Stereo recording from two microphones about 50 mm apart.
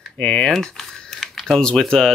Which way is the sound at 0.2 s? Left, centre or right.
Centre.